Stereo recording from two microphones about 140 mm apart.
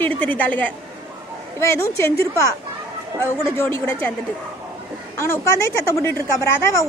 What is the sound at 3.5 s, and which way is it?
Speech, 15° left (ahead or behind).